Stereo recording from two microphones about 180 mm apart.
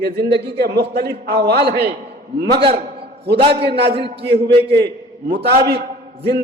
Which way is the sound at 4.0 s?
70° right (ahead or behind).